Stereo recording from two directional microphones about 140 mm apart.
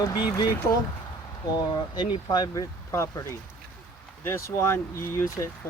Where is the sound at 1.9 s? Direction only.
30° left (ahead or behind).